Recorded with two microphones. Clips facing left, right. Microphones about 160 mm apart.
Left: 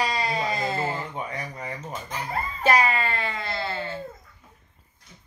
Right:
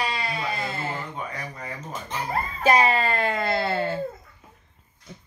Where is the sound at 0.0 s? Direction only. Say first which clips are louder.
Left 2 dB; 40° left (ahead or behind).